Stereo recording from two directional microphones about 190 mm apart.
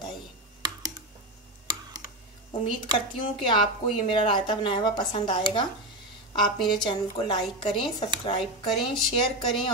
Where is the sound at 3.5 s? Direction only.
25° left (ahead or behind).